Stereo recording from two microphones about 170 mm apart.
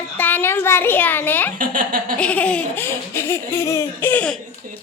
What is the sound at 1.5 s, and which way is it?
Speech, 55° right (ahead or behind).